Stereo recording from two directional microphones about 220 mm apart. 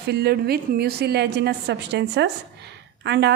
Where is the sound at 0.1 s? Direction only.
45° right (ahead or behind).